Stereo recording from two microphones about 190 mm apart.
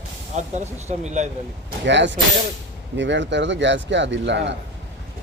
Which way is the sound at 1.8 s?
70° right (ahead or behind).